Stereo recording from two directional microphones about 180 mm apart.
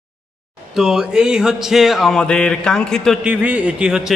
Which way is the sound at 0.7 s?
5° right (ahead or behind).